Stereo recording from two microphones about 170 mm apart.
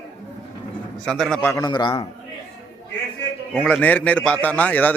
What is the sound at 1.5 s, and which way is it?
Speech, 25° left (ahead or behind).